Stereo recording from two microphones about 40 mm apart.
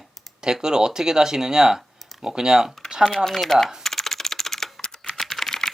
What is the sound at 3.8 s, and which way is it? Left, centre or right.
Typing, centre.